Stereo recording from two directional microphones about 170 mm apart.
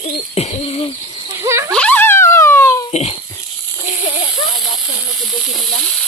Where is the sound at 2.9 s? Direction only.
35° left (ahead or behind).